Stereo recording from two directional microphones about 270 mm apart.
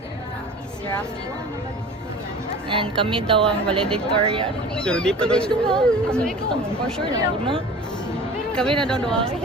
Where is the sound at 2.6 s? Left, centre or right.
Centre.